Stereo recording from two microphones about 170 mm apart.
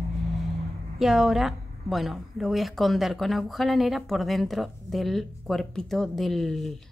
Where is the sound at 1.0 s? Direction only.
Centre (ahead or behind).